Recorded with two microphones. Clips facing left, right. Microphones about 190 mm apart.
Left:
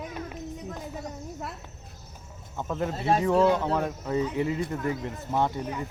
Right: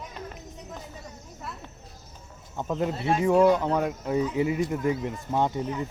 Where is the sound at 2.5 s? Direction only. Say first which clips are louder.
Right 2 dB; 15° right (ahead or behind).